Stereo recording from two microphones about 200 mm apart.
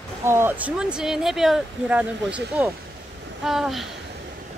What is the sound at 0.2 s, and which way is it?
Speech, 10° right (ahead or behind).